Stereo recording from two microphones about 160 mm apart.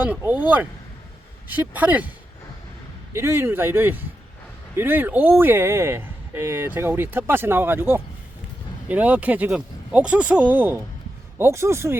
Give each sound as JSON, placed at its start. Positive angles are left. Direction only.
{"t": 0.2, "sound": "speech", "side_deg": -10}
{"t": 3.1, "sound": "speech", "side_deg": -15}